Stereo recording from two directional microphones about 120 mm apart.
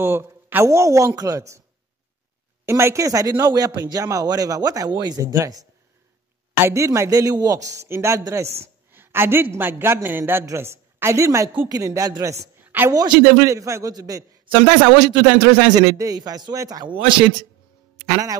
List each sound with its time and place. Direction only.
0.0 s a man's voice: 20° right (ahead or behind)
2.6 s a man's voice: 20° right (ahead or behind)
12.6 s a sound: 15° right (ahead or behind)
12.9 s a man's voice: 30° right (ahead or behind)
18.0 s a man's voice: 30° right (ahead or behind)